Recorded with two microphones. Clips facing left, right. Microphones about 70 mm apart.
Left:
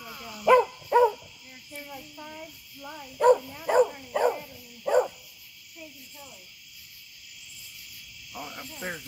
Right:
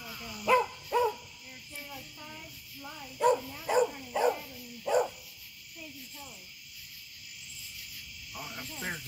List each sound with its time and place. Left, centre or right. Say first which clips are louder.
0.0 s dog: left 2 dB; centre
0.5 s dog: left 7 dB; left
1.9 s child singing: left 4 dB; centre
3.2 s dog: left 6 dB; left
3.7 s dog: left 5 dB; left
4.9 s dog: left 5 dB; left
8.3 s frog: left 3 dB; centre